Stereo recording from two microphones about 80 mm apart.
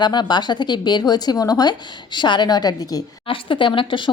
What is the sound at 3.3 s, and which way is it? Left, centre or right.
Speech, left.